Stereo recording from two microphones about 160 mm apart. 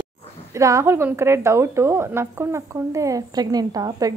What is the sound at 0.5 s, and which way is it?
Speech, 20° right (ahead or behind).